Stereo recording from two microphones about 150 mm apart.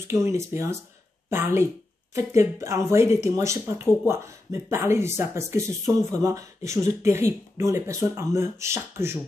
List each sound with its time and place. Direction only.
0.0 s speech: 20° right (ahead or behind)